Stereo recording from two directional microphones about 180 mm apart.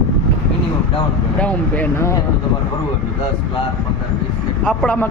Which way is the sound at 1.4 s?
10° left (ahead or behind).